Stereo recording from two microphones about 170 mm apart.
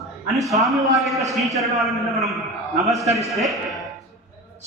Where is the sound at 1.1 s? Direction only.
20° right (ahead or behind).